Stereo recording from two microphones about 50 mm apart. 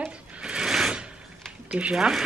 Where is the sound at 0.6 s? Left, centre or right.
Centre.